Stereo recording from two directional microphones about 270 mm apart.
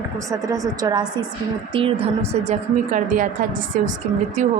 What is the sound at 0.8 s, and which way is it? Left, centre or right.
Speech, centre.